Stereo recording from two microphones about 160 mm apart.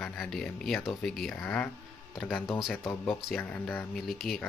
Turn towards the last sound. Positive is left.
turn(degrees=0)  # may be behind; listen again after turning